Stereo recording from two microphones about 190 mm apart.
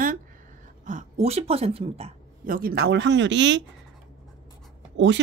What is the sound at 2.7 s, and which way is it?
Speech, 65° right (ahead or behind).